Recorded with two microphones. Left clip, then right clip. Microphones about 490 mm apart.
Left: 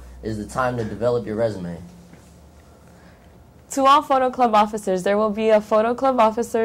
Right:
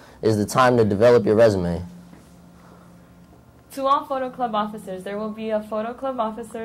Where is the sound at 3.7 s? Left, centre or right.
Left.